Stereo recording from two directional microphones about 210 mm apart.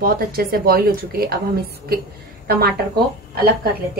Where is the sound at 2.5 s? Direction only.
45° right (ahead or behind).